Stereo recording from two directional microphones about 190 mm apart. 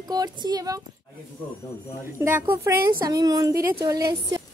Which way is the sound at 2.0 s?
10° right (ahead or behind).